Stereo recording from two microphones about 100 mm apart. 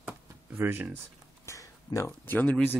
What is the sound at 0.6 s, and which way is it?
Speech, 25° right (ahead or behind).